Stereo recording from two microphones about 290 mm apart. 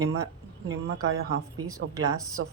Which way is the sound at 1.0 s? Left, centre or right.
Right.